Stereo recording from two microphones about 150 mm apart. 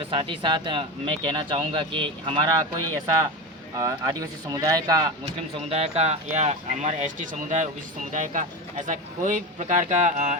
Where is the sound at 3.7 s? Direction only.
25° right (ahead or behind).